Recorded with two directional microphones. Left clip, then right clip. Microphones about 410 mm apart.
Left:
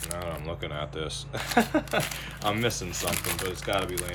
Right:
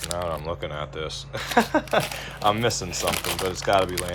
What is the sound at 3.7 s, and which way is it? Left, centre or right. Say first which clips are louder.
Speech: right 8 dB; right.